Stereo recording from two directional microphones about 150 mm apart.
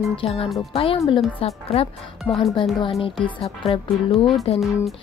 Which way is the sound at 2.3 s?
15° left (ahead or behind).